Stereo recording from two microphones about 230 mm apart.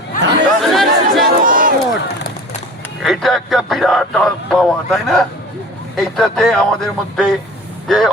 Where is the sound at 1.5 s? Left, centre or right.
Right.